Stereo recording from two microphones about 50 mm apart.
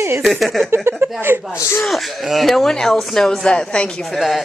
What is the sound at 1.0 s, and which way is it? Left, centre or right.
Speech, right.